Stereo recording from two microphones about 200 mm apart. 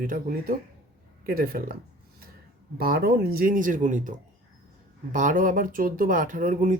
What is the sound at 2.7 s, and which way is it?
Speech, 50° right (ahead or behind).